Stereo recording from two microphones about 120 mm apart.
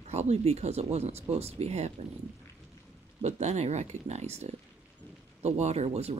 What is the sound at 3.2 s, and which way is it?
Speech, 70° right (ahead or behind).